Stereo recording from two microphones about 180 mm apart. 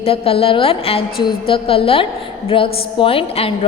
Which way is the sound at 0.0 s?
30° left (ahead or behind).